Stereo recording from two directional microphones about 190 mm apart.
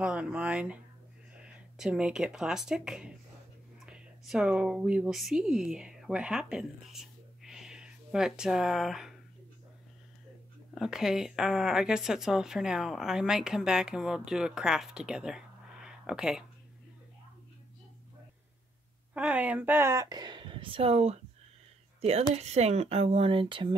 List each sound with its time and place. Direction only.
0.0 s speech: 5° right (ahead or behind)
10.7 s speech: centre (ahead or behind)
19.1 s speech: 5° right (ahead or behind); by 23.7 s 25° right (ahead or behind)